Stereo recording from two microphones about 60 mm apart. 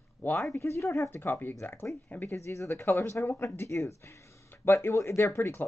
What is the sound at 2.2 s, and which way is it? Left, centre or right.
Speech, left.